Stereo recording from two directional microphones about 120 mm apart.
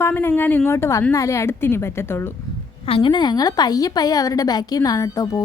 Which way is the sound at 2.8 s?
45° left (ahead or behind).